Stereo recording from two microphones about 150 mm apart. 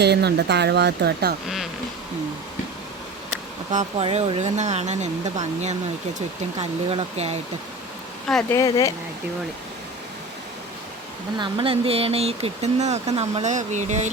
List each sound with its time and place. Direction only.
0.0 s speech: 90° right
3.7 s speech: 55° right (ahead or behind)
4.0 s speech: 40° right (ahead or behind)
8.4 s speech: 20° left (ahead or behind)
11.3 s speech: 35° right (ahead or behind); by 14.1 s 50° right (ahead or behind)